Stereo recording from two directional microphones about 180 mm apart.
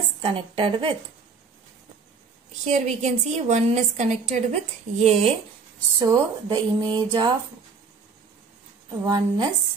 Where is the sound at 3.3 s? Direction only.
40° right (ahead or behind).